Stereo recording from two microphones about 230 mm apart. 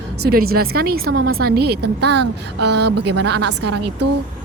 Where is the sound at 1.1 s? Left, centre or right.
Right.